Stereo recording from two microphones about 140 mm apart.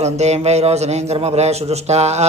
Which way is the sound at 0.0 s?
50° right (ahead or behind).